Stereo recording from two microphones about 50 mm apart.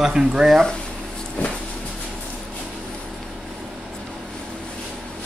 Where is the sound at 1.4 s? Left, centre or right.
Left.